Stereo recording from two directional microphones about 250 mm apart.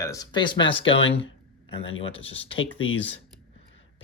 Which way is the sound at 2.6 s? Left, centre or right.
Left.